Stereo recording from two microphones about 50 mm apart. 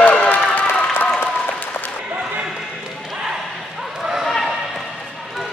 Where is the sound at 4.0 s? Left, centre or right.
Centre.